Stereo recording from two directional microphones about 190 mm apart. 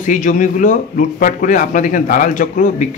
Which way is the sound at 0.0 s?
45° left (ahead or behind).